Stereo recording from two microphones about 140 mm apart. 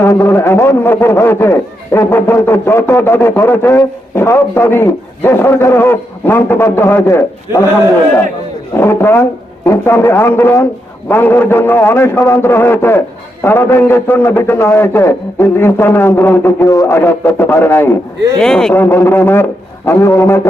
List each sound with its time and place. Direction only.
0.0 s a man's voice: 15° left (ahead or behind)
8.7 s a man's voice: 15° left (ahead or behind)
18.3 s speech: 5° left (ahead or behind)
18.7 s a man's voice: 15° left (ahead or behind)